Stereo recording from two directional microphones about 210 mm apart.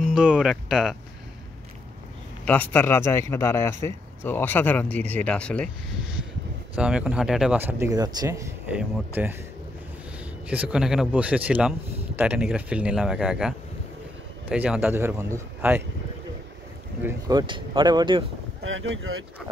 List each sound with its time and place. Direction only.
0.0 s speech: 5° right (ahead or behind)
2.4 s speech: 10° left (ahead or behind)
6.7 s speech: 5° right (ahead or behind)
10.5 s speech: 5° right (ahead or behind)
17.0 s speech: 20° right (ahead or behind)
18.6 s speech: 70° right (ahead or behind)